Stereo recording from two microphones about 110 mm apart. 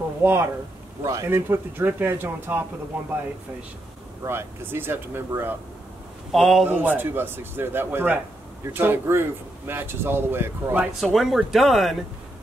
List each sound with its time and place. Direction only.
0.2 s speech: 20° right (ahead or behind)
4.2 s speech: 20° right (ahead or behind)
6.3 s speech: centre (ahead or behind)
6.7 s speech: 15° right (ahead or behind)
11.0 s speech: centre (ahead or behind)